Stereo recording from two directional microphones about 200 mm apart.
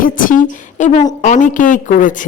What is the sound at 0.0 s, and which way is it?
A woman's voice, 40° left (ahead or behind).